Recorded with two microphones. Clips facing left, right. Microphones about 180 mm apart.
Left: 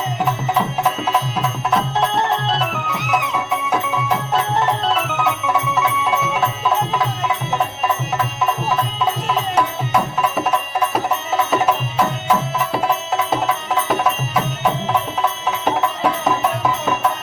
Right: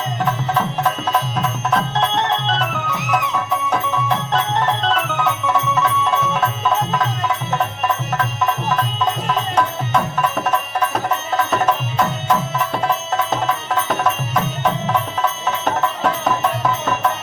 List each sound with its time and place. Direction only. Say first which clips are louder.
0.3 s music: even; 10° left (ahead or behind)